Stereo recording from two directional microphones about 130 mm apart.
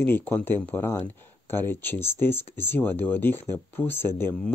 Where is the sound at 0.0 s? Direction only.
15° left (ahead or behind).